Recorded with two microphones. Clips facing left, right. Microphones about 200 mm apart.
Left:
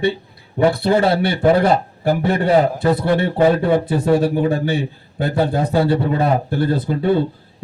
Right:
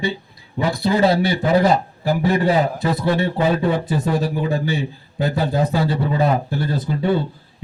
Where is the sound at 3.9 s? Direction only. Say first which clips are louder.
Left 5 dB; 55° left (ahead or behind).